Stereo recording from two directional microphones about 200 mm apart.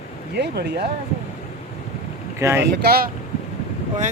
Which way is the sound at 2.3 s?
15° right (ahead or behind).